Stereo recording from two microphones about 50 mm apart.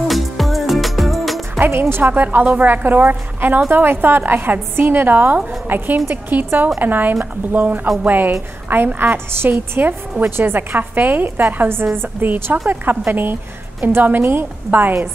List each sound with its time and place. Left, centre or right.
0.1 s music: centre
1.6 s a woman's voice: right
2.4 s a woman's voice: right
2.7 s a woman's voice: right